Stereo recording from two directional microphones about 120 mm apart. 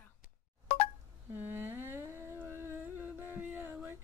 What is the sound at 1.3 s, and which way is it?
Humming, 15° right (ahead or behind).